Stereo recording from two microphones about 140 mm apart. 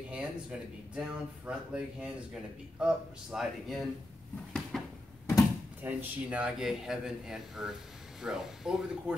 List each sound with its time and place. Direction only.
0.1 s speech: 10° right (ahead or behind)
4.7 s a sound: 5° left (ahead or behind)
5.8 s speech: 10° right (ahead or behind)